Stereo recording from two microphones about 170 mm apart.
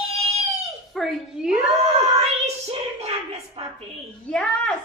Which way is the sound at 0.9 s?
Centre (ahead or behind).